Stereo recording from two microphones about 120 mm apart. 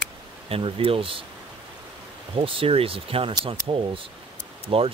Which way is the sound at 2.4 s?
50° right (ahead or behind).